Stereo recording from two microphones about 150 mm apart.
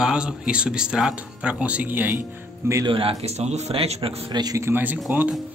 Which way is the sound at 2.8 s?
35° right (ahead or behind).